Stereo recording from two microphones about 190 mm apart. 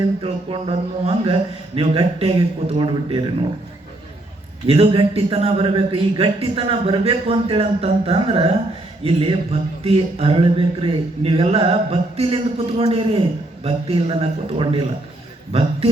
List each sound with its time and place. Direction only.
0.2 s speech: 30° right (ahead or behind)
4.6 s a man's voice: 30° right (ahead or behind)